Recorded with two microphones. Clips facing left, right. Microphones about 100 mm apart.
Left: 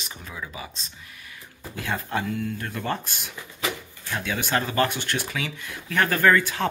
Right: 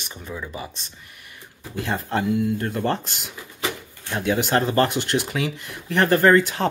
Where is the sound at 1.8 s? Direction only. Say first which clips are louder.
Right 4 dB; 25° right (ahead or behind).